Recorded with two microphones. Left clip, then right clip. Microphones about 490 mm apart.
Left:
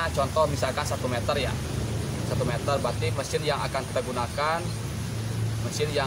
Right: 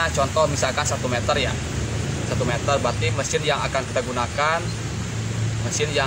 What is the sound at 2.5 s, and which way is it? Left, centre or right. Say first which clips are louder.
Speech: right 6 dB; left.